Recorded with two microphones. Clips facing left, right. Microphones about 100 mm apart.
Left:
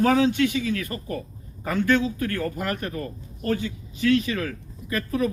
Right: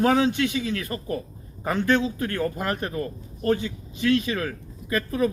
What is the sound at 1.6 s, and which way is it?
Speech, 25° right (ahead or behind).